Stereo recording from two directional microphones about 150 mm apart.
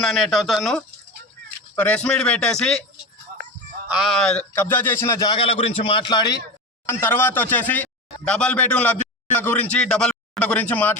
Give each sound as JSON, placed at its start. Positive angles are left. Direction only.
{"t": 0.0, "sound": "speech", "side_deg": 0}
{"t": 3.8, "sound": "a man's voice", "side_deg": -5}
{"t": 6.8, "sound": "speech", "side_deg": 15}